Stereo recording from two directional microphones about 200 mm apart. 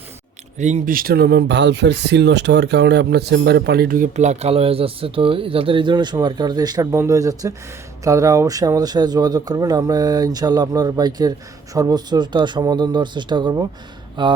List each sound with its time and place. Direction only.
0.6 s speech: 40° right (ahead or behind); by 14.3 s 25° right (ahead or behind)